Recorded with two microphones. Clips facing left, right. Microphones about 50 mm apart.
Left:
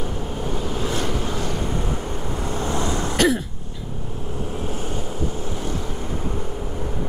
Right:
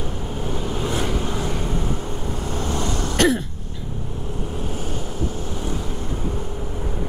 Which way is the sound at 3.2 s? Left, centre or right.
Centre.